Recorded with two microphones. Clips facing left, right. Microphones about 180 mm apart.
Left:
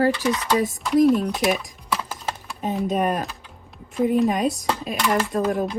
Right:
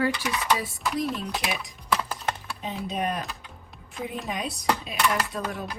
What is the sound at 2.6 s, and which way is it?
Speech, 45° left (ahead or behind).